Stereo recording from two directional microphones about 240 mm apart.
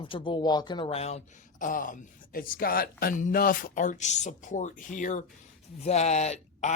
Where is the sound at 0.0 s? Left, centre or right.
Left.